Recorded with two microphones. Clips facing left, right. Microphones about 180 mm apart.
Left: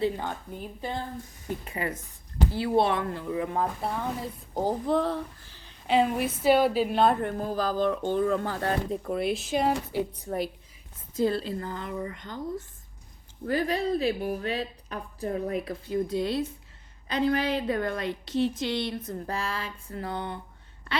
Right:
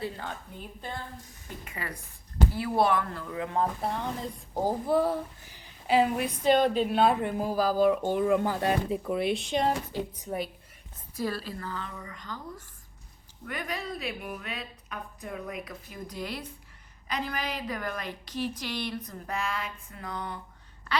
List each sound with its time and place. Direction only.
1.6 s a woman's voice: 25° left (ahead or behind)
3.6 s a woman's voice: centre (ahead or behind)
5.9 s a woman's voice: centre (ahead or behind)
8.9 s speech: 5° right (ahead or behind)
11.2 s a woman's voice: 25° left (ahead or behind)
13.4 s a woman's voice: 35° left (ahead or behind)